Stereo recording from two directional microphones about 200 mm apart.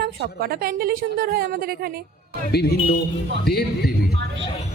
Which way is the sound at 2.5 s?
55° left (ahead or behind).